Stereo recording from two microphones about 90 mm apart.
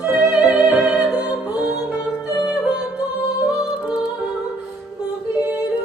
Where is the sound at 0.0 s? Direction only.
15° right (ahead or behind).